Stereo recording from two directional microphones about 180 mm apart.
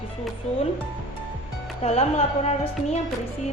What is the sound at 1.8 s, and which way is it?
A woman's voice, 35° left (ahead or behind).